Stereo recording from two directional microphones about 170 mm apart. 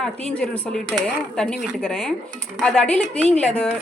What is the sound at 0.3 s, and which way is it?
A woman's voice, 5° left (ahead or behind).